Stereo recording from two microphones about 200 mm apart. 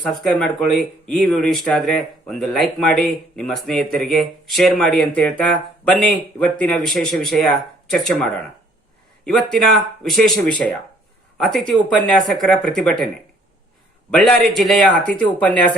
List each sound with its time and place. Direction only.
0.2 s a woman's voice: centre (ahead or behind)
14.1 s speech: 5° left (ahead or behind)